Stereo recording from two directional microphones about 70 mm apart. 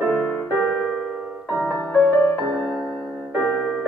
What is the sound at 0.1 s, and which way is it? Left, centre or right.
Music, centre.